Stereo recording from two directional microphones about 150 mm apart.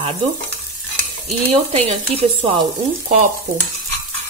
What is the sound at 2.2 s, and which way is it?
Stir, 35° right (ahead or behind).